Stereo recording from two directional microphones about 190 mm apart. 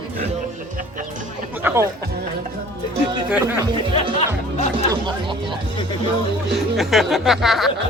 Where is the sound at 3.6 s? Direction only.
25° right (ahead or behind).